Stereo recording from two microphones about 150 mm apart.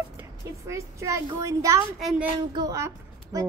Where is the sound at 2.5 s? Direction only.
25° right (ahead or behind).